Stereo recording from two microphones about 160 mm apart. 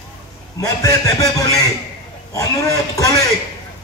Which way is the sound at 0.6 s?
20° left (ahead or behind).